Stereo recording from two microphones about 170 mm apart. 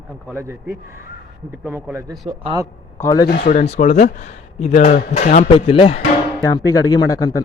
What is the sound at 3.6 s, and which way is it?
Speech, 45° left (ahead or behind).